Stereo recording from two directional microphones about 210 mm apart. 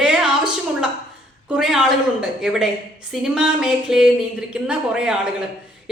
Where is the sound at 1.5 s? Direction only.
Centre (ahead or behind).